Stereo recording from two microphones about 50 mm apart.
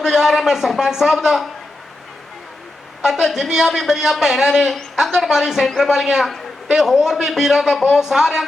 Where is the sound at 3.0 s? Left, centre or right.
Centre.